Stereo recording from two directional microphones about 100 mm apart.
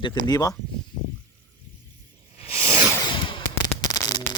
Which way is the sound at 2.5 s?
25° right (ahead or behind).